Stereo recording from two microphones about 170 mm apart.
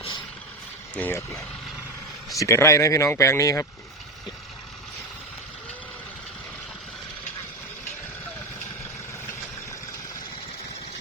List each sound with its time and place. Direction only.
0.9 s speech: 10° left (ahead or behind)